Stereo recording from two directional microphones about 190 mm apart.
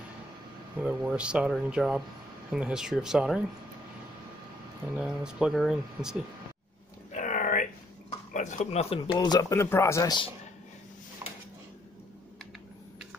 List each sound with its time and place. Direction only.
0.8 s speech: 5° right (ahead or behind)
4.9 s speech: 5° right (ahead or behind)
7.1 s a sound: 40° left (ahead or behind)
8.3 s speech: 40° left (ahead or behind); by 10.3 s 20° left (ahead or behind)